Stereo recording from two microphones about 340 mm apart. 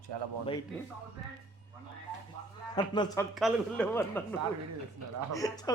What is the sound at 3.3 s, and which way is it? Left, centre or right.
Speech, centre.